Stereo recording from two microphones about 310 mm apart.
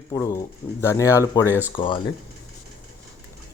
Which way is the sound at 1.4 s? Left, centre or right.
Centre.